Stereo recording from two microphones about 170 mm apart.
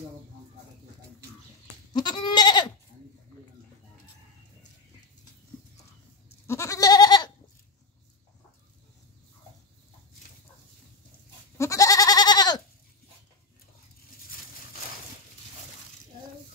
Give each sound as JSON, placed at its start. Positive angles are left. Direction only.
{"t": 2.0, "sound": "goat", "side_deg": 25}
{"t": 6.4, "sound": "goat", "side_deg": 15}
{"t": 11.5, "sound": "goat", "side_deg": 20}